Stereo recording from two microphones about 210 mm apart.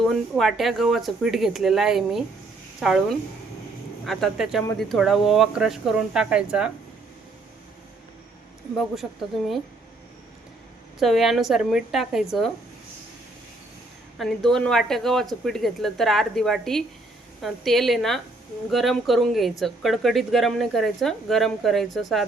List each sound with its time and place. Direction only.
0.0 s speech: centre (ahead or behind)
11.0 s speech: centre (ahead or behind)
14.2 s speech: centre (ahead or behind)